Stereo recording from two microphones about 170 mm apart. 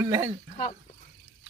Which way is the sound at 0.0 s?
15° right (ahead or behind).